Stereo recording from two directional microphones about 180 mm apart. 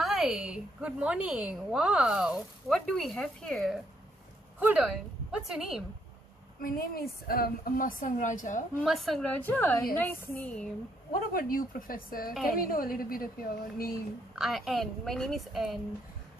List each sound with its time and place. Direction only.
0.0 s a woman's voice: centre (ahead or behind)
6.6 s a woman's voice: 55° left (ahead or behind)
8.8 s a woman's voice: centre (ahead or behind)
11.3 s a woman's voice: 50° left (ahead or behind)
14.3 s a woman's voice: centre (ahead or behind)